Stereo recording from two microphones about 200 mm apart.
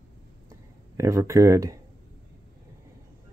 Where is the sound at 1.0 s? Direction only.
15° right (ahead or behind).